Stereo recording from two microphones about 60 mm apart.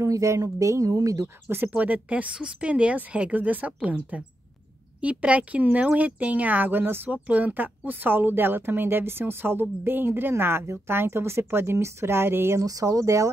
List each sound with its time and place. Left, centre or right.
0.0 s speech: right
1.8 s speech: right
2.3 s a woman's voice: centre
2.7 s speech: right
7.1 s speech: right
12.5 s speech: right